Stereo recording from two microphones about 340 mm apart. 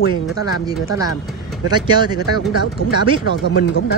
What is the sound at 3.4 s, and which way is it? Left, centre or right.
Speech, left.